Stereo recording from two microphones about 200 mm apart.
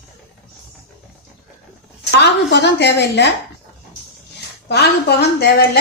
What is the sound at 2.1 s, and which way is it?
A woman's voice, 60° left (ahead or behind).